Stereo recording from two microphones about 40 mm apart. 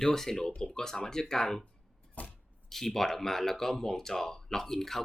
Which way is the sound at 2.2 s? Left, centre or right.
Left.